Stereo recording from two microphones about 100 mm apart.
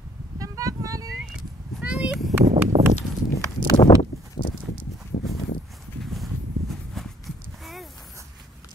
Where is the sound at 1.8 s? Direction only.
10° right (ahead or behind).